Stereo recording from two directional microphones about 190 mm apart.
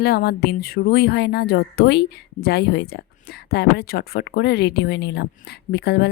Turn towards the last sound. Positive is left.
turn(degrees=60)  # may be behind; listen again after turning